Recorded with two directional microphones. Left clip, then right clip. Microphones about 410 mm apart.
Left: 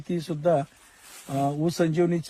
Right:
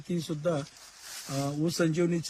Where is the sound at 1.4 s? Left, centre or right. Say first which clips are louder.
Left 4 dB; centre.